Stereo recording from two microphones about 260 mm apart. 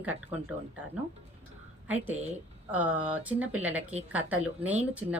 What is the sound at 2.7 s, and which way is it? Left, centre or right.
Speech, centre.